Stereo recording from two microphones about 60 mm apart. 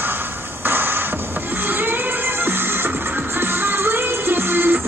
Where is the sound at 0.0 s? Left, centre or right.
Right.